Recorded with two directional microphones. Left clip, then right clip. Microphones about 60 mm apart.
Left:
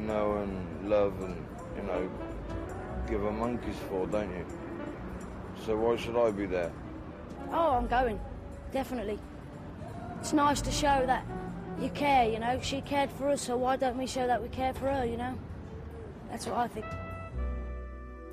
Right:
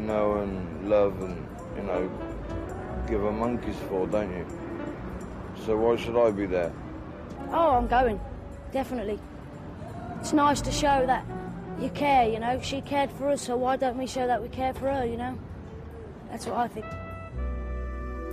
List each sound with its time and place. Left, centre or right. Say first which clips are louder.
0.0 s a man's voice: right 5 dB; left
10.2 s a woman's voice: right 4 dB; left